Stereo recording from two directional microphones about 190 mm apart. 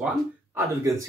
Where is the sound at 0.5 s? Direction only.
15° right (ahead or behind).